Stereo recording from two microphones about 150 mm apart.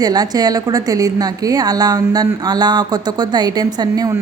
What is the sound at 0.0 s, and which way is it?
A woman's voice, 25° right (ahead or behind).